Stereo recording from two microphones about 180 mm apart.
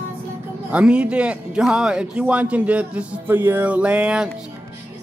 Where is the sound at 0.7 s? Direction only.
5° right (ahead or behind).